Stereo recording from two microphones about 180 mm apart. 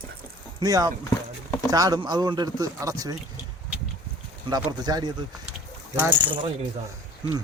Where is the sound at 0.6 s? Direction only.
20° right (ahead or behind).